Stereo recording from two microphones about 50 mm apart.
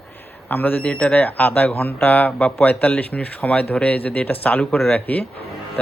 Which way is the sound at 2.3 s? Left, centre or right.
Left.